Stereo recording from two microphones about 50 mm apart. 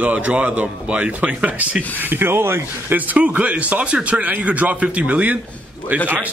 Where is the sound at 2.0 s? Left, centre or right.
Right.